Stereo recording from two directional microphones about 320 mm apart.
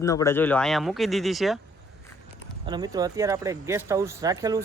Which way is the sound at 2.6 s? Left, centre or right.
Centre.